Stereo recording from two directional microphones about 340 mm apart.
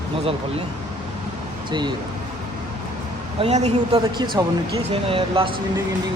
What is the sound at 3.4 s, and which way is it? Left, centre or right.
A man's voice, centre.